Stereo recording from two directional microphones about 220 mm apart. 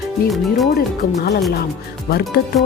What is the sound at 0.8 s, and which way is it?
Speech, 45° left (ahead or behind).